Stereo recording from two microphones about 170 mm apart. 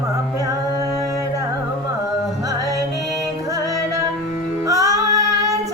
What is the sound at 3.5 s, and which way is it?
Music, 20° right (ahead or behind).